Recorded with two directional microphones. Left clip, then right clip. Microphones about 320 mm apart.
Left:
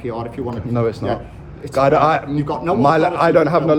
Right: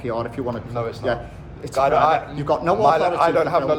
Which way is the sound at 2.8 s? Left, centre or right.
Left.